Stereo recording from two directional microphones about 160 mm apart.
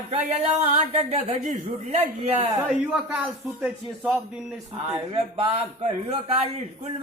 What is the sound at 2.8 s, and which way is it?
A man's voice, 5° right (ahead or behind).